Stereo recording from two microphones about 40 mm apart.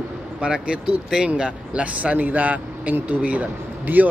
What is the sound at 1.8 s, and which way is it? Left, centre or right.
Speech, right.